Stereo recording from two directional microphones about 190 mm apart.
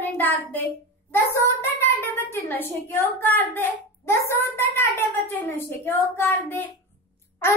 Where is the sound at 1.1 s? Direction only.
15° left (ahead or behind).